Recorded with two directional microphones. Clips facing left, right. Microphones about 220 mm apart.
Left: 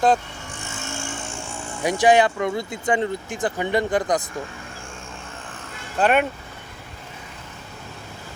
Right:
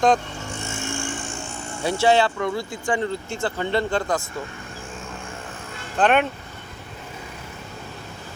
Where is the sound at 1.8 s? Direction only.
15° left (ahead or behind).